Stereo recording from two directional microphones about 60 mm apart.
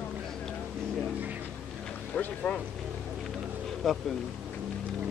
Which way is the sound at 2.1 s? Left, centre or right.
Left.